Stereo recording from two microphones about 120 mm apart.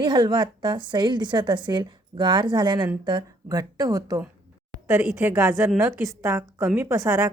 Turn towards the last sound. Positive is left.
turn(degrees=-25)  # may be behind; listen again after turning